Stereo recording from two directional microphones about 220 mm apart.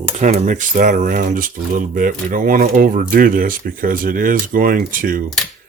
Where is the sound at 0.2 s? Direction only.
35° right (ahead or behind).